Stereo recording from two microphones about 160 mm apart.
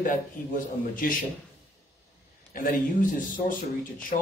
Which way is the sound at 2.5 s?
55° left (ahead or behind).